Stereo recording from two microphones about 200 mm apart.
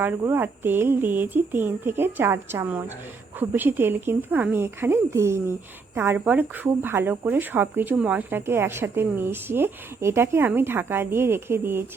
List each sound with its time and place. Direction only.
0.0 s speech: 10° right (ahead or behind)